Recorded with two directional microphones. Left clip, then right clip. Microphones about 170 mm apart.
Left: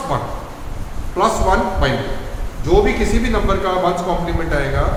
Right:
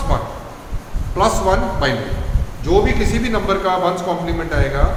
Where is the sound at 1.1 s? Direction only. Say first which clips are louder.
Even; 35° right (ahead or behind).